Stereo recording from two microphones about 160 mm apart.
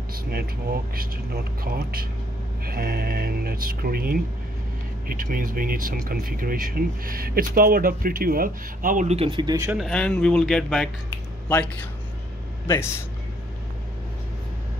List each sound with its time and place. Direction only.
0.1 s speech: 75° right (ahead or behind); by 9.7 s 25° right (ahead or behind)
9.7 s speech: centre (ahead or behind); by 13.0 s 15° left (ahead or behind)